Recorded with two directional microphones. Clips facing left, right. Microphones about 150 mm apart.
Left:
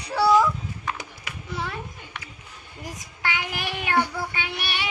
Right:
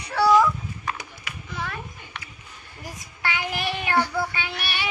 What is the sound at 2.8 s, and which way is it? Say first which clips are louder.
Child singing: even; 15° left (ahead or behind).